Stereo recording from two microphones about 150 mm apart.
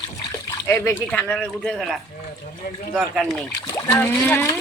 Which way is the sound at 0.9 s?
10° left (ahead or behind).